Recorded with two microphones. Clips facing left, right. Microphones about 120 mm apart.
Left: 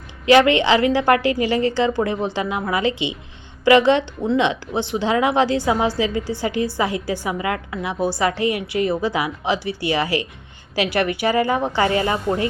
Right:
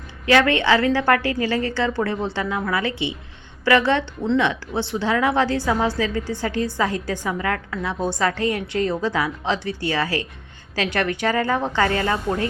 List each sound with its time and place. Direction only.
0.3 s a woman's voice: 15° left (ahead or behind)